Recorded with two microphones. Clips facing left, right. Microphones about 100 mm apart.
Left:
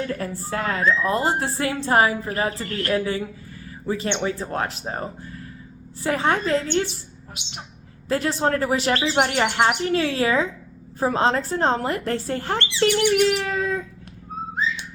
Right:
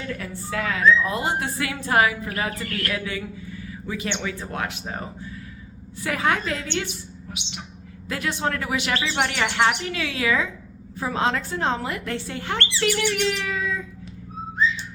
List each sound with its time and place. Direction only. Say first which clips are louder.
0.1 s a woman's voice: left 3 dB; 35° left (ahead or behind)
8.0 s a woman's voice: left 5 dB; 35° left (ahead or behind)
12.5 s speech: left 3 dB; 20° left (ahead or behind)
13.2 s bird: left 4 dB; 40° left (ahead or behind)